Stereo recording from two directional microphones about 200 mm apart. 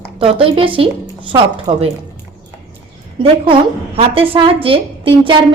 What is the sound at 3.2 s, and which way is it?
A woman's voice, 25° right (ahead or behind).